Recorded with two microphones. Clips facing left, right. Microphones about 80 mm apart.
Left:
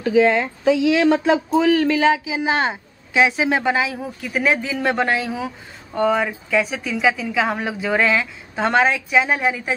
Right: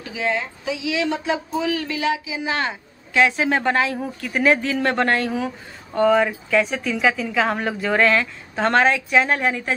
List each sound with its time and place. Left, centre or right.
0.0 s speech: left
3.2 s a woman's voice: centre